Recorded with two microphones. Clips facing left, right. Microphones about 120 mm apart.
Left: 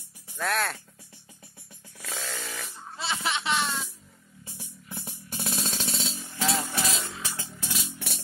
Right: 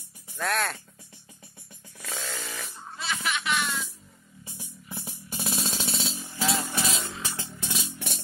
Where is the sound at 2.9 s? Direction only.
25° left (ahead or behind).